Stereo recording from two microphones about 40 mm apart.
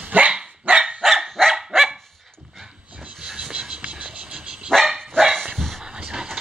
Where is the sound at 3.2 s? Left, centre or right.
Centre.